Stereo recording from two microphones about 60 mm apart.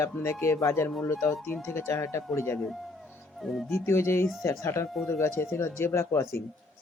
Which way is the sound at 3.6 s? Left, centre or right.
Left.